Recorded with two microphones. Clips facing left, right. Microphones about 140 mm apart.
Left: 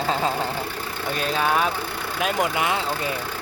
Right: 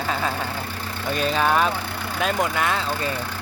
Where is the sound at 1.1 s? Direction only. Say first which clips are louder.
Right 2 dB; centre (ahead or behind).